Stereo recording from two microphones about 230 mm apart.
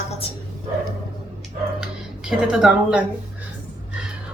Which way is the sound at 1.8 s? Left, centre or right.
Centre.